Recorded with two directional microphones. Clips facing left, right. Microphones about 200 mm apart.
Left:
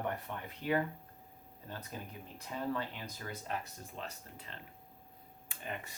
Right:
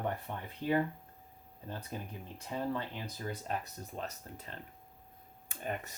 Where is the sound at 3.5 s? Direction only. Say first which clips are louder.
Right 2 dB; 40° right (ahead or behind).